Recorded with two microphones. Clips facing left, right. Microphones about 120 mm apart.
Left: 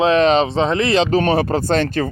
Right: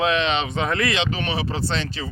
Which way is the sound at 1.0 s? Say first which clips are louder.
Left 10 dB; 40° left (ahead or behind).